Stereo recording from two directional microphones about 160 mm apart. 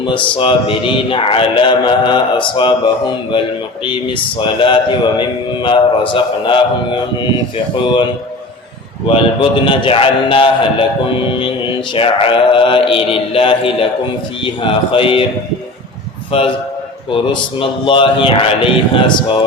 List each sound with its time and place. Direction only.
0.0 s a man's voice: 30° left (ahead or behind)
9.0 s a man's voice: 35° left (ahead or behind)
16.3 s a man's voice: 35° left (ahead or behind)
17.6 s a man's voice: 30° left (ahead or behind)